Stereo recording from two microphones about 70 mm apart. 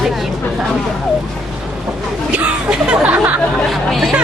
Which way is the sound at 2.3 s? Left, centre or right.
Centre.